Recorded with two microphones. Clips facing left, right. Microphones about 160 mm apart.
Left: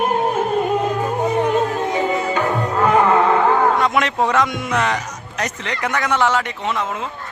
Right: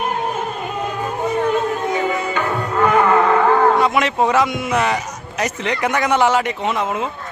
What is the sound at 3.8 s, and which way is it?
A man's voice, 5° right (ahead or behind).